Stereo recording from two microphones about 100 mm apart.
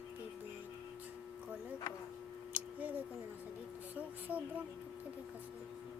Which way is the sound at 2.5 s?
15° right (ahead or behind).